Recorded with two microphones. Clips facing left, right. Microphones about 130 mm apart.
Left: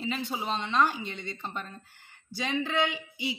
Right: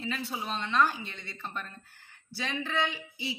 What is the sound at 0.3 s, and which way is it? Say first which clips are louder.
A woman's voice: left 2 dB; 20° left (ahead or behind).